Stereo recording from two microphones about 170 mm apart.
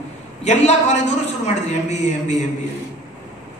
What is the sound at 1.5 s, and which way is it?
Speech, 40° left (ahead or behind).